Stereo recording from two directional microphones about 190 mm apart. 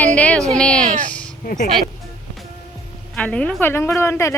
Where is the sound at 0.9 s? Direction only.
40° right (ahead or behind).